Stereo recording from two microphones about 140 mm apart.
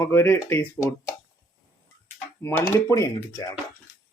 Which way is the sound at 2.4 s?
15° left (ahead or behind).